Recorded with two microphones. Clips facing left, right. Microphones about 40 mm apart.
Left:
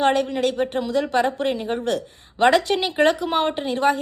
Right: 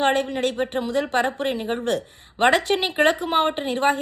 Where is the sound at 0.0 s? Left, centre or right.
Right.